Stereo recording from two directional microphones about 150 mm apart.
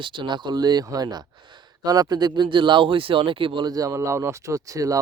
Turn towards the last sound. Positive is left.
turn(degrees=-20)  # may be behind; listen again after turning